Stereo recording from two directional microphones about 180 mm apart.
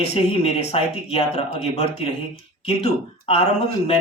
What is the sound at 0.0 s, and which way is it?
Speech, 35° left (ahead or behind).